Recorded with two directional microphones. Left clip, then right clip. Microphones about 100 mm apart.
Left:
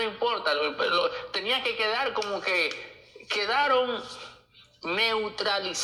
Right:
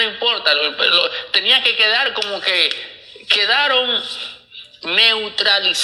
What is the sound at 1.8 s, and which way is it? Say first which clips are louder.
Speech: right 10 dB; 10° left (ahead or behind).